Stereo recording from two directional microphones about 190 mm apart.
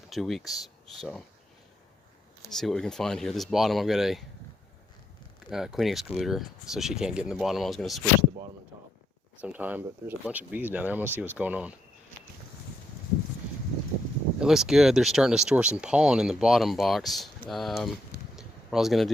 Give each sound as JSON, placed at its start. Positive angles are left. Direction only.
{"t": 0.1, "sound": "speech", "side_deg": 0}
{"t": 2.5, "sound": "speech", "side_deg": 0}
{"t": 5.5, "sound": "speech", "side_deg": 0}
{"t": 9.4, "sound": "speech", "side_deg": -10}
{"t": 14.3, "sound": "speech", "side_deg": 0}
{"t": 18.3, "sound": "a sound", "side_deg": 0}